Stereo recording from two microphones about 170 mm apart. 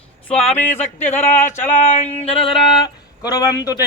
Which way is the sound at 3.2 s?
20° left (ahead or behind).